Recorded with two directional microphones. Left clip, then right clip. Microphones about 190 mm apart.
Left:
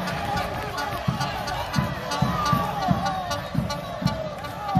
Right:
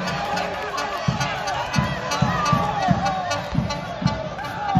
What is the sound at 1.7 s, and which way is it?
Music, 20° right (ahead or behind).